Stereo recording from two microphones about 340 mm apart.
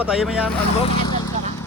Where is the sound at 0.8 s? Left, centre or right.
Centre.